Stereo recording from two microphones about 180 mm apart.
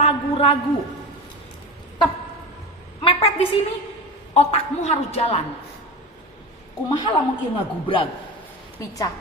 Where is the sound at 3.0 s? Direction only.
35° left (ahead or behind).